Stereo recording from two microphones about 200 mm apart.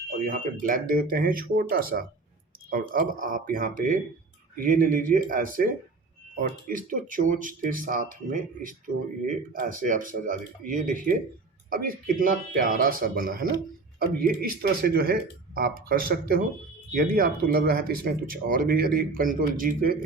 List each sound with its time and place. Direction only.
0.6 s speech: 45° right (ahead or behind)
6.7 s speech: 45° right (ahead or behind)